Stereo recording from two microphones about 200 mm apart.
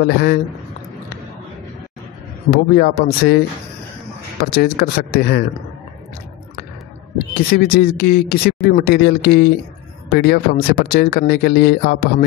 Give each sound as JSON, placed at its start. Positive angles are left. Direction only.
{"t": 0.0, "sound": "speech", "side_deg": 50}
{"t": 2.5, "sound": "speech", "side_deg": 50}
{"t": 7.5, "sound": "speech", "side_deg": 50}